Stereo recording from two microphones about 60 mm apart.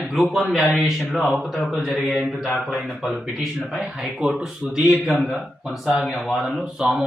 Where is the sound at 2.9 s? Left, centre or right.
Centre.